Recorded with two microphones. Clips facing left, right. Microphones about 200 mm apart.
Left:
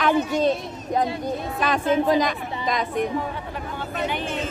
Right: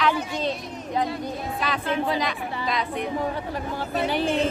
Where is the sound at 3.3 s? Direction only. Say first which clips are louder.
Right 2 dB; 35° right (ahead or behind).